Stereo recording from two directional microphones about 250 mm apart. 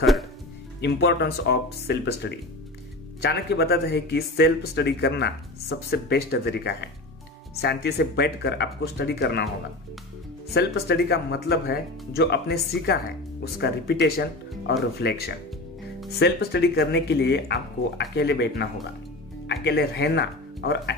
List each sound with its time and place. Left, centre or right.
0.0 s music: centre
0.7 s speech: left
10.5 s speech: left